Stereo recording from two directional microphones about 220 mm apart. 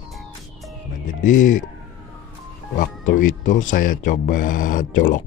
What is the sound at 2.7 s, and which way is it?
Speech, 35° left (ahead or behind).